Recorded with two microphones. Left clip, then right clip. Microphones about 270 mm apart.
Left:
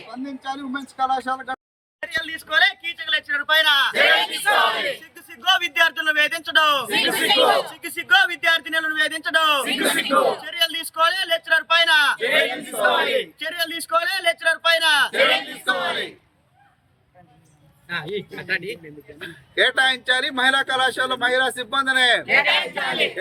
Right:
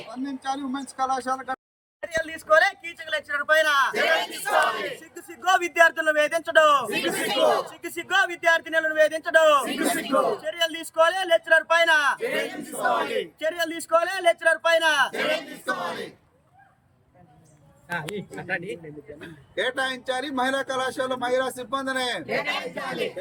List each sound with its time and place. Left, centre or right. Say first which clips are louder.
0.1 s speech: even; centre
2.2 s a man's voice: left 1 dB; centre
5.5 s a man's voice: left 1 dB; centre
18.1 s a man's voice: left 5 dB; centre